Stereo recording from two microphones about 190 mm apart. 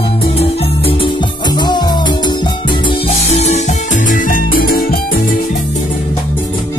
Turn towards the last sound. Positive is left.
turn(degrees=50)  # may be behind; listen again after turning